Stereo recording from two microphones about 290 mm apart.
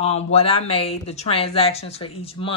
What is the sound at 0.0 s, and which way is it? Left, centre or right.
A woman's voice, left.